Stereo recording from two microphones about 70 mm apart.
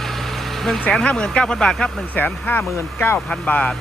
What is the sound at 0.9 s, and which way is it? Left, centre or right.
Speech, centre.